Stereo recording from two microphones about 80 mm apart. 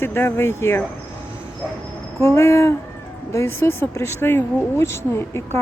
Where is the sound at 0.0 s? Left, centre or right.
Left.